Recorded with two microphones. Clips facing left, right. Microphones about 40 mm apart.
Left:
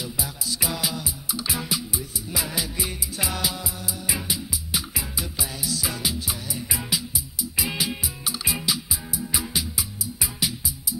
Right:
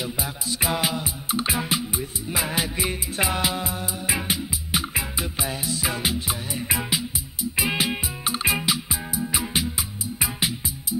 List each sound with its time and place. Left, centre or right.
0.0 s music: right